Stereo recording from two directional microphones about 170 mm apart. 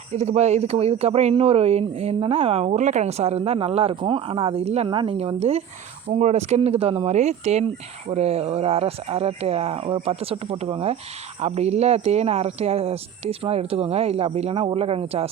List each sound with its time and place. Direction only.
0.1 s speech: 40° right (ahead or behind)